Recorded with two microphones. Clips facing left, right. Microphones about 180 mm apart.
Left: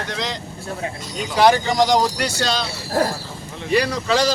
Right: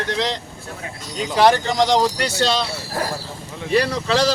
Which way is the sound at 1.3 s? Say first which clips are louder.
Even; centre (ahead or behind).